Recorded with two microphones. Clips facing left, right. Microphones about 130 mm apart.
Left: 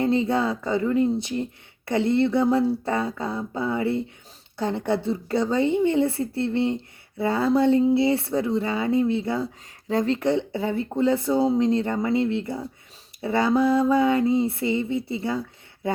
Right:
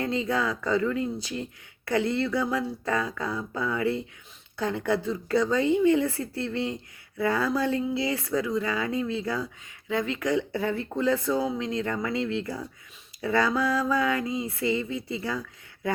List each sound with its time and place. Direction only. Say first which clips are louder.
0.0 s speech: left 5 dB; 30° left (ahead or behind)
9.9 s speech: left 4 dB; 35° left (ahead or behind)